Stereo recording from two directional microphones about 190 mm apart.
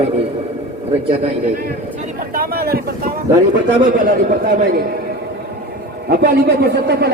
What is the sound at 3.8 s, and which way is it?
Speech, 45° right (ahead or behind).